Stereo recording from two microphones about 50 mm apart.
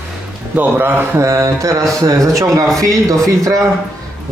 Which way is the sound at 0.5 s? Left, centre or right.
Right.